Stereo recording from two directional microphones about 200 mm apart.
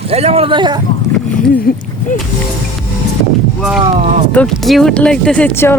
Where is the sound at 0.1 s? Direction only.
30° right (ahead or behind).